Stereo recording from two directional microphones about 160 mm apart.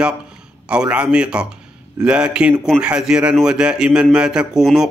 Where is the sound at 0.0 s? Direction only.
5° right (ahead or behind).